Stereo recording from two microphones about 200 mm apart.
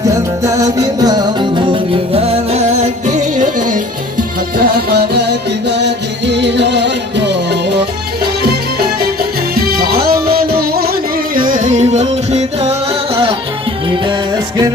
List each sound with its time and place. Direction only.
0.0 s music: 15° right (ahead or behind)